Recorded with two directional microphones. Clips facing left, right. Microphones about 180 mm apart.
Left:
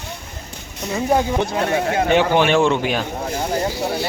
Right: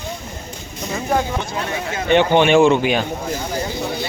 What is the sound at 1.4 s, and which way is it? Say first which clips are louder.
Speech: left 6 dB; 55° left (ahead or behind).